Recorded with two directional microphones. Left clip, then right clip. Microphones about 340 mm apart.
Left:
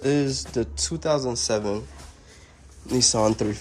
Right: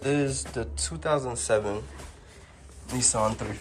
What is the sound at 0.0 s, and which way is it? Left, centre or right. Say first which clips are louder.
Speech: left 3 dB; left.